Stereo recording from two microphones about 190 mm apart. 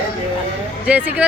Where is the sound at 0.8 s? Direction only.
10° right (ahead or behind).